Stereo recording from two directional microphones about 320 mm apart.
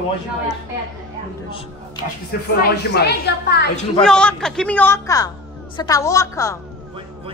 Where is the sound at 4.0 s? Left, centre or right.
Centre.